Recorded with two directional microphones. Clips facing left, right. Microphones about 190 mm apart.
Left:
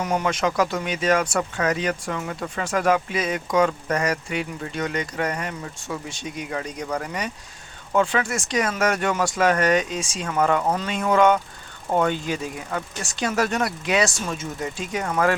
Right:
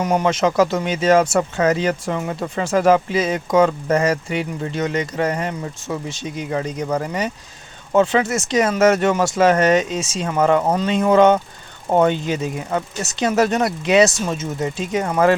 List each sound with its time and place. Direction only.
0.0 s speech: 20° right (ahead or behind)